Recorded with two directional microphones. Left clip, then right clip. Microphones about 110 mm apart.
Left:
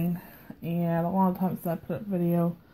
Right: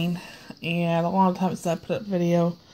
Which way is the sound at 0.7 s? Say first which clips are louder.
Right 5 dB; 20° right (ahead or behind).